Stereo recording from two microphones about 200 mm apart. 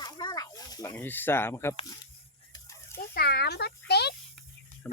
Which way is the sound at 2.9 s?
50° left (ahead or behind).